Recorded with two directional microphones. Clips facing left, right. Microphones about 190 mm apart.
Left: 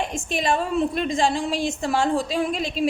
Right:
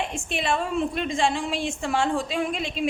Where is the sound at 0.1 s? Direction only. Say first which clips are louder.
Left 3 dB; 40° left (ahead or behind).